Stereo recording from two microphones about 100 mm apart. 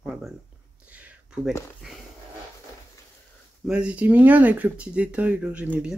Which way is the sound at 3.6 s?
10° right (ahead or behind).